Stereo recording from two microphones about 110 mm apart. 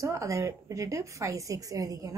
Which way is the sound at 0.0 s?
30° right (ahead or behind).